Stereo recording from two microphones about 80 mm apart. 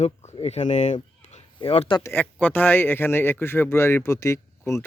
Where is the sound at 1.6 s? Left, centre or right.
Left.